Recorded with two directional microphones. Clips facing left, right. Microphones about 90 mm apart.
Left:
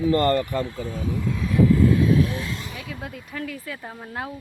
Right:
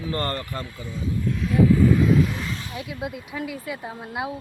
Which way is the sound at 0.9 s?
50° left (ahead or behind).